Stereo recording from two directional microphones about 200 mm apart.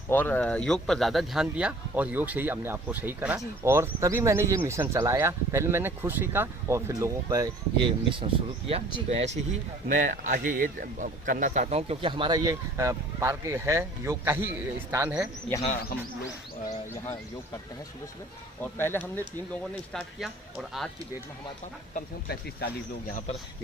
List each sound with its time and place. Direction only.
0.1 s speech: 10° left (ahead or behind); by 15.3 s 10° right (ahead or behind)
16.6 s speech: 10° left (ahead or behind)
18.6 s speech: 10° left (ahead or behind)
21.9 s speech: 50° left (ahead or behind)